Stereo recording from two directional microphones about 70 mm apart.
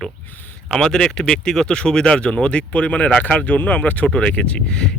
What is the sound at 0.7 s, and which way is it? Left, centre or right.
Speech, centre.